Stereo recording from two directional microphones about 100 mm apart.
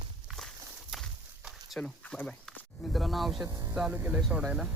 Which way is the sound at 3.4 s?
35° right (ahead or behind).